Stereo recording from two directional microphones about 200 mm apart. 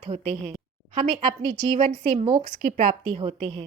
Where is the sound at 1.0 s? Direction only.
25° right (ahead or behind).